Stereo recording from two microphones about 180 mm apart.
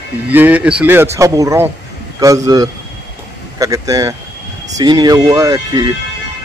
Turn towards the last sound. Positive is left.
turn(degrees=-20)  # may be behind; listen again after turning